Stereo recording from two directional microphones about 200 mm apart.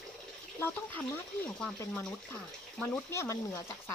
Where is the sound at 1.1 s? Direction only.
5° left (ahead or behind).